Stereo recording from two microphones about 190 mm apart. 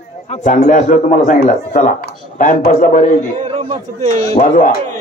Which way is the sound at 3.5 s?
35° right (ahead or behind).